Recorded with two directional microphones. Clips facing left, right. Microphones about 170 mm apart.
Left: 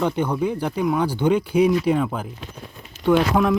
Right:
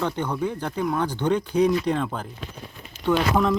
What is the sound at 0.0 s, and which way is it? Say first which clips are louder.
Speech: left 4 dB; 10° left (ahead or behind).